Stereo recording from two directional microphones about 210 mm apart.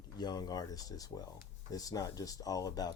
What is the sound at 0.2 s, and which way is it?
Speech, 20° left (ahead or behind).